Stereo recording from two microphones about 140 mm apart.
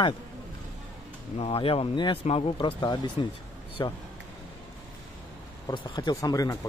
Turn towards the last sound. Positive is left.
turn(degrees=25)  # may be behind; listen again after turning